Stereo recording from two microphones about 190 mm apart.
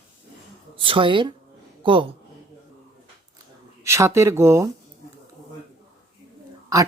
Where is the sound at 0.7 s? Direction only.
25° right (ahead or behind).